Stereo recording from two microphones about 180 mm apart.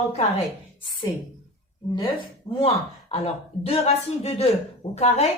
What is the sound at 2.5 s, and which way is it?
Speech, 35° left (ahead or behind).